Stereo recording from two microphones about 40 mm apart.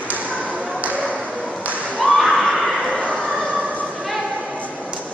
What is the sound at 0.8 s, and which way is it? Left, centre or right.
Tap, right.